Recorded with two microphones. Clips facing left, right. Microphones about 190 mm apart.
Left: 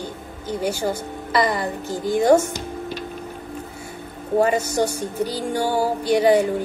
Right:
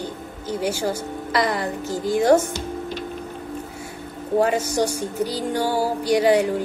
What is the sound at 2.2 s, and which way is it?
Music, 10° left (ahead or behind).